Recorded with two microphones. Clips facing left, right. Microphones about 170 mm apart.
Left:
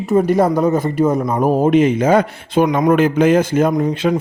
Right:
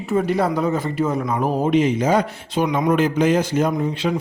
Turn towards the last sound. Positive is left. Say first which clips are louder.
# left 5 dB
turn(degrees=50)  # may be behind; listen again after turning